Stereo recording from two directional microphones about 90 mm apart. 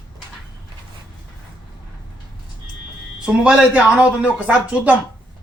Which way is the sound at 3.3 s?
10° right (ahead or behind).